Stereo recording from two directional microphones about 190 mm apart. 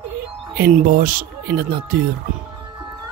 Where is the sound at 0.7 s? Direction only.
45° right (ahead or behind).